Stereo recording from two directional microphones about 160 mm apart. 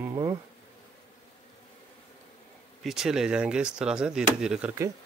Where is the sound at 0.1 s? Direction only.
20° right (ahead or behind).